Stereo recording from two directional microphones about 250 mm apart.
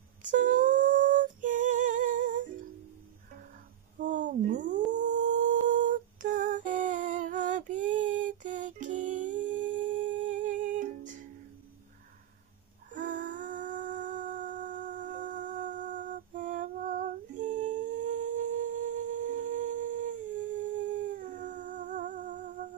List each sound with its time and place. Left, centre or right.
0.2 s female singing: right
4.0 s cat: right
5.0 s humming: right
12.9 s humming: right